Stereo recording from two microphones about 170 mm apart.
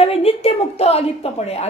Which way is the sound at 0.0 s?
35° left (ahead or behind).